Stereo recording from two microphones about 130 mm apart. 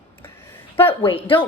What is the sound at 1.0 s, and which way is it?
Speech, 45° left (ahead or behind).